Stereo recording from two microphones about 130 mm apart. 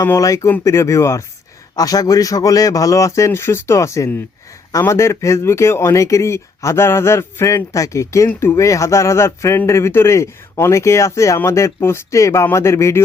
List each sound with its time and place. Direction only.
0.0 s speech: 25° left (ahead or behind)